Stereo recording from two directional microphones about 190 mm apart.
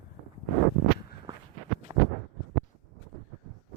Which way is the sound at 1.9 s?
20° right (ahead or behind).